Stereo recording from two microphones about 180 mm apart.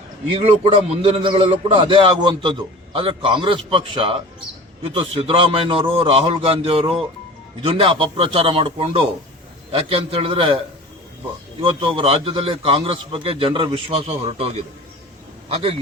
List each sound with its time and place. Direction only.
0.3 s a man's voice: 35° right (ahead or behind)
11.6 s a man's voice: 30° right (ahead or behind)